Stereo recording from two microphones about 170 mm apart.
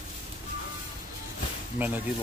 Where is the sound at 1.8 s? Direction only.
10° right (ahead or behind).